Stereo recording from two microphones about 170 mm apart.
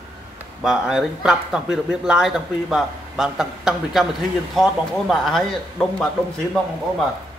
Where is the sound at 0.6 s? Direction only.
5° right (ahead or behind).